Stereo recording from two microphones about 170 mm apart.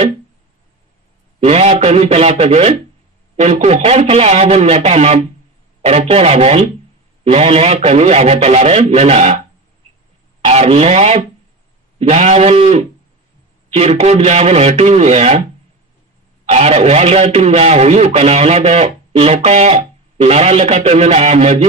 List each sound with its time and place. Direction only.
1.4 s a man's voice: 40° right (ahead or behind)
10.4 s a man's voice: 40° right (ahead or behind)
16.4 s a man's voice: 40° right (ahead or behind)